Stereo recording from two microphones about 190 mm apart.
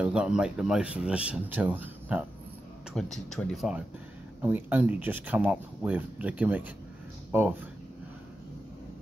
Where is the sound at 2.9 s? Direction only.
Centre (ahead or behind).